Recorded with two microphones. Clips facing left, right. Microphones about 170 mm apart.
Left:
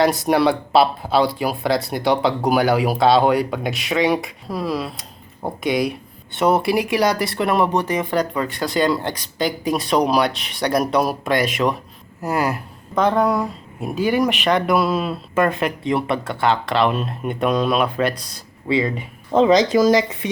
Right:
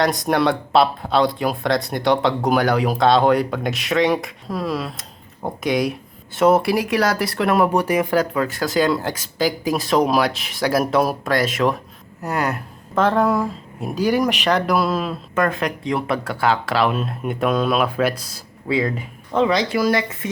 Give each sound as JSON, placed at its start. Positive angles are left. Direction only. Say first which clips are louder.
{"t": 0.3, "sound": "speech", "louder": "left 2 dB", "side_deg": 5}
{"t": 19.3, "sound": "speech", "louder": "left 4 dB", "side_deg": 30}